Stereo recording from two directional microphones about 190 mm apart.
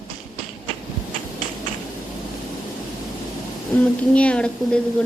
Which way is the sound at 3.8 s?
5° left (ahead or behind).